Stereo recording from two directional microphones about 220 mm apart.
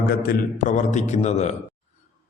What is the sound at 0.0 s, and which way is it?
A man's voice, 45° left (ahead or behind).